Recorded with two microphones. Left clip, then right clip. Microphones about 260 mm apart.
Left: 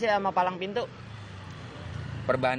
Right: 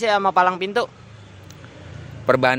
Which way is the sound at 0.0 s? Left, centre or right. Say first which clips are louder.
Right 8 dB; right.